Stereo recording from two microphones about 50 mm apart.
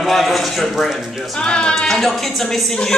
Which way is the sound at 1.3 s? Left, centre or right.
Centre.